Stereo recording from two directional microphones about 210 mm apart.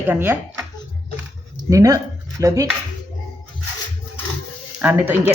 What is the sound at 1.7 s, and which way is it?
Speech, 15° right (ahead or behind).